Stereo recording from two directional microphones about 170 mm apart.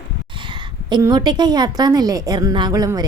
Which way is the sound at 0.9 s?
25° right (ahead or behind).